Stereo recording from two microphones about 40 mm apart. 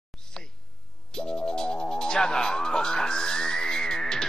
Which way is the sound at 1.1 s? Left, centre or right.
Centre.